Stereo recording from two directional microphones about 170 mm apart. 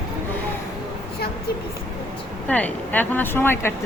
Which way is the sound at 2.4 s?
10° left (ahead or behind).